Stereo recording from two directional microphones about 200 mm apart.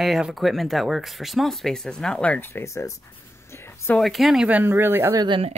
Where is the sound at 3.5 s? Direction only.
10° left (ahead or behind).